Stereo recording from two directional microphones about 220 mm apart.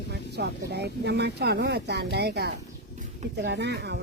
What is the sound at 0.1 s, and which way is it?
Speech, 50° right (ahead or behind).